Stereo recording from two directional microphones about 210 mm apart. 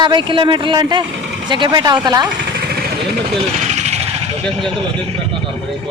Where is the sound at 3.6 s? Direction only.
35° right (ahead or behind).